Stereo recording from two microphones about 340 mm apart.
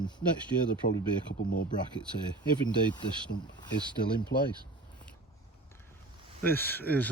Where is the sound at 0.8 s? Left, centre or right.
Left.